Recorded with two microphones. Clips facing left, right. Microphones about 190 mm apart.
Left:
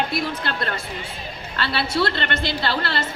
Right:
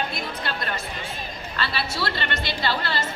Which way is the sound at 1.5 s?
60° left (ahead or behind).